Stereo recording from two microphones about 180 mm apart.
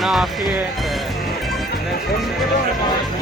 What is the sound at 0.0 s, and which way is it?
Music, centre (ahead or behind).